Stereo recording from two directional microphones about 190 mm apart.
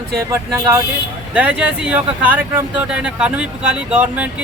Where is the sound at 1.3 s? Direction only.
5° right (ahead or behind).